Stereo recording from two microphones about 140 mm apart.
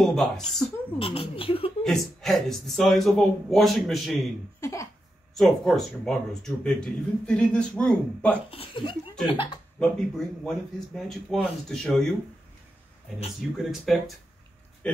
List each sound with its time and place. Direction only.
0.0 s speech: 5° left (ahead or behind)
0.9 s a child's voice: 40° left (ahead or behind)
1.9 s speech: centre (ahead or behind)
4.6 s a sound: 20° left (ahead or behind)
5.3 s speech: centre (ahead or behind)
8.5 s a child's voice: 40° left (ahead or behind)
9.8 s speech: 5° left (ahead or behind)
13.6 s speech: centre (ahead or behind)